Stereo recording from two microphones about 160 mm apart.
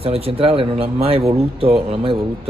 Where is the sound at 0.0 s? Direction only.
35° right (ahead or behind).